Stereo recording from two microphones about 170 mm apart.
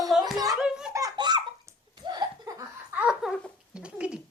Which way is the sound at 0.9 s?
20° right (ahead or behind).